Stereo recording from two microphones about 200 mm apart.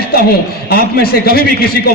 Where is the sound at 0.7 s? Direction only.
50° left (ahead or behind).